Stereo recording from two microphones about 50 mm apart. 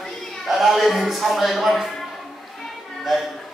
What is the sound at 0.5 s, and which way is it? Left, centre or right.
Speech, centre.